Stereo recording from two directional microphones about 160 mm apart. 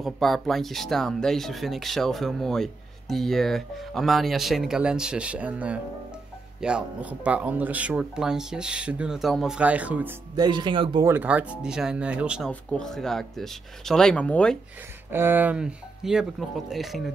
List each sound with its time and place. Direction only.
0.0 s speech: centre (ahead or behind)
10.3 s speech: 25° right (ahead or behind)
11.1 s speech: 10° right (ahead or behind)
12.4 s speech: 5° left (ahead or behind)
15.0 s speech: 15° right (ahead or behind)